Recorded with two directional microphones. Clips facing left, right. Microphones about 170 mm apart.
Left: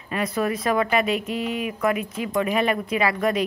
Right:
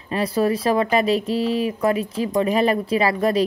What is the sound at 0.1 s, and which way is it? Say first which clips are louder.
Speech: right 4 dB; 30° right (ahead or behind).